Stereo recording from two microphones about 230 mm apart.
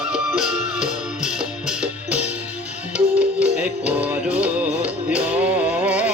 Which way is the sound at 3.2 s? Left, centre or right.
Centre.